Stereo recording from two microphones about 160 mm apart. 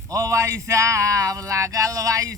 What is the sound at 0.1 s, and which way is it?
Speech, 20° right (ahead or behind).